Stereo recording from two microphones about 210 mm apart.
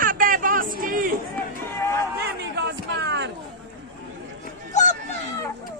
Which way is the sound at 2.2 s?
55° right (ahead or behind).